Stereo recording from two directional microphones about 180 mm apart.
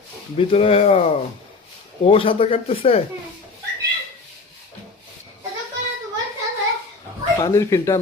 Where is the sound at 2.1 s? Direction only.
30° left (ahead or behind).